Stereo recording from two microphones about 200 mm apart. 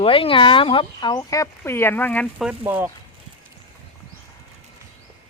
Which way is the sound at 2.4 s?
10° right (ahead or behind).